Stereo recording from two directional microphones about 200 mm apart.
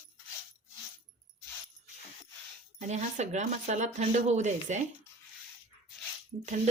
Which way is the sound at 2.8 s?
35° right (ahead or behind).